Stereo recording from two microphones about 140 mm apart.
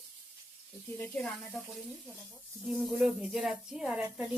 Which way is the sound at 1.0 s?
5° left (ahead or behind).